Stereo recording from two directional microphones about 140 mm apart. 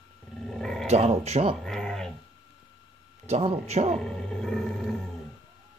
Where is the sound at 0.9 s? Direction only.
50° right (ahead or behind).